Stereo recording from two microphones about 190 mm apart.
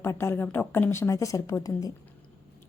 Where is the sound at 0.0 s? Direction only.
10° left (ahead or behind).